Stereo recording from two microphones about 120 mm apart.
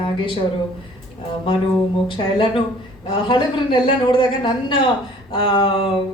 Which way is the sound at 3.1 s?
45° left (ahead or behind).